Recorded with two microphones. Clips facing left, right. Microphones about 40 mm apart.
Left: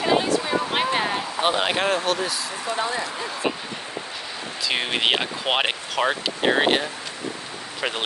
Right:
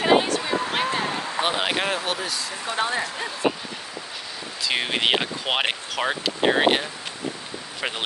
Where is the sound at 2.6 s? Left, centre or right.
Right.